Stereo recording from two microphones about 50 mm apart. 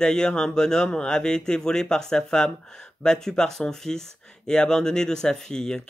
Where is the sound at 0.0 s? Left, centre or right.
Centre.